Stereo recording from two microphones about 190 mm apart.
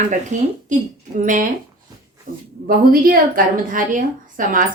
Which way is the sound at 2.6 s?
50° right (ahead or behind).